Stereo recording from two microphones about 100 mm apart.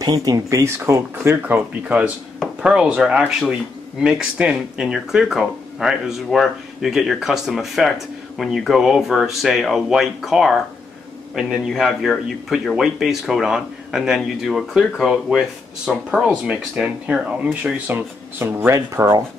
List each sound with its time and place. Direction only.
0.0 s speech: 40° right (ahead or behind); by 1.6 s 25° right (ahead or behind)
2.6 s a man's voice: 10° right (ahead or behind)
17.8 s speech: 20° right (ahead or behind)